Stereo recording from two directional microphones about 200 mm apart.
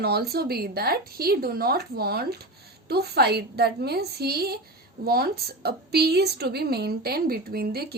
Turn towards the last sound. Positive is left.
turn(degrees=-50)  # may be behind; listen again after turning